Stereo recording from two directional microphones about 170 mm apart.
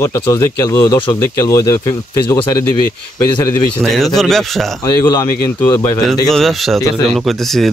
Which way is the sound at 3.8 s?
Centre (ahead or behind).